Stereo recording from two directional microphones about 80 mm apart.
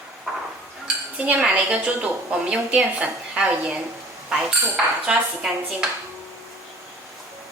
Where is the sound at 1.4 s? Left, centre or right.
Centre.